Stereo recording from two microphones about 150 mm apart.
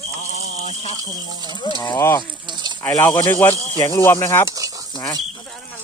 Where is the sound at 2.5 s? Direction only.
30° right (ahead or behind).